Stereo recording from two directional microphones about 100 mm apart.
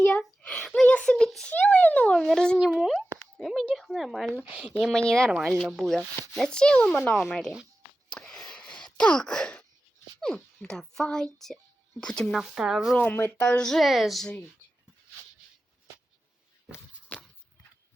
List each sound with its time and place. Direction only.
0.0 s a sound: 10° left (ahead or behind)
2.6 s a sound: 5° right (ahead or behind)
2.9 s plop: 5° left (ahead or behind)
4.4 s speech: 15° right (ahead or behind)
4.8 s speech: 5° left (ahead or behind)
8.1 s wail: 5° left (ahead or behind)
10.2 s a child's voice: 5° left (ahead or behind)
13.0 s speech: 15° left (ahead or behind); by 14.3 s centre (ahead or behind)
17.1 s a sound: 15° left (ahead or behind)